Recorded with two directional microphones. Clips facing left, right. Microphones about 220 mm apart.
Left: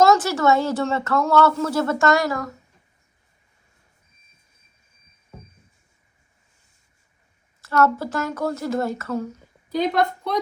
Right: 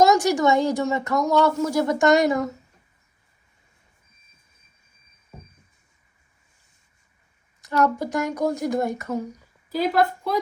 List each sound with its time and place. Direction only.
0.0 s speech: 15° right (ahead or behind)
7.6 s a sound: 15° right (ahead or behind)
7.9 s a woman's voice: 15° right (ahead or behind)